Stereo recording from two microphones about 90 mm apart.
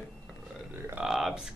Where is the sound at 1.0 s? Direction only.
5° right (ahead or behind).